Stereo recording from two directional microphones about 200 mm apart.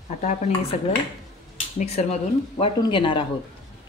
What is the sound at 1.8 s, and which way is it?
Speech, 35° left (ahead or behind).